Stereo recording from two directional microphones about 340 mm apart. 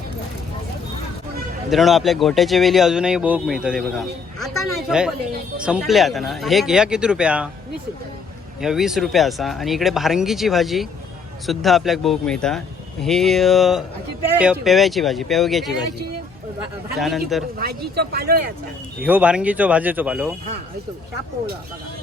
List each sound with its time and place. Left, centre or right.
1.7 s speech: centre
8.6 s speech: centre
17.0 s speech: centre
17.6 s speech: right
19.0 s speech: centre